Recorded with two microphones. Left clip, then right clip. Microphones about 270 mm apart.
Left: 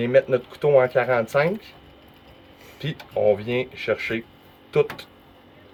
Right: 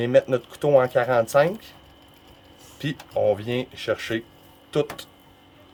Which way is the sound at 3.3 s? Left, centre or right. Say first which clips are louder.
Left 3 dB; right.